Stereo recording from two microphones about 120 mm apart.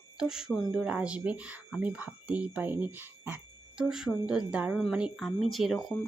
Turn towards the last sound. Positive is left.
turn(degrees=0)  # may be behind; listen again after turning